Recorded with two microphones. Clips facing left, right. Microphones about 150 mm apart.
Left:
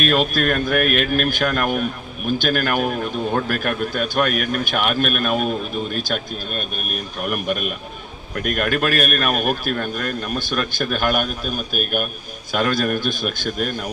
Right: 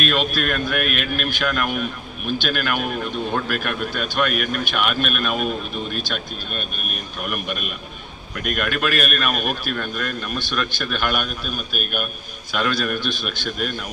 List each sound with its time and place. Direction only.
0.0 s speech: 45° left (ahead or behind)